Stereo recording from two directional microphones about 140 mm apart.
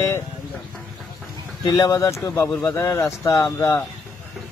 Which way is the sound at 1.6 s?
25° left (ahead or behind).